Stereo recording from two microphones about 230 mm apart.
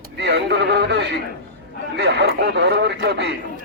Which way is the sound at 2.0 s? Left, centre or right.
Right.